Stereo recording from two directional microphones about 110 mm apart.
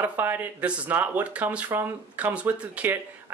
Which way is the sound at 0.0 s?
20° right (ahead or behind).